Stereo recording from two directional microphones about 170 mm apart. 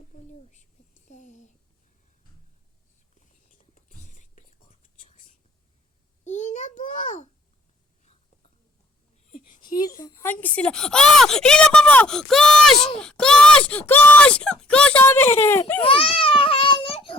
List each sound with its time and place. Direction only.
0.1 s a sound: 45° left (ahead or behind)
3.8 s whispering: 45° left (ahead or behind)
6.2 s a sound: 45° left (ahead or behind)
9.6 s a woman's voice: 25° left (ahead or behind)
10.3 s speech: 10° left (ahead or behind)
15.8 s babbling: 30° left (ahead or behind)